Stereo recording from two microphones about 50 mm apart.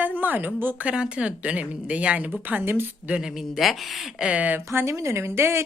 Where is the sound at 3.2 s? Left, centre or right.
Centre.